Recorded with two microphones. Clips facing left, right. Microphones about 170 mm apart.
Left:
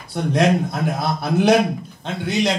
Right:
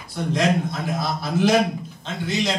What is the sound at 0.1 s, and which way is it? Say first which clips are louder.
A man's voice: left 4 dB; 60° left (ahead or behind).